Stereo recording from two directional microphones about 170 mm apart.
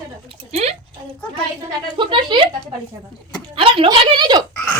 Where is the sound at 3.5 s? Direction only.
30° right (ahead or behind).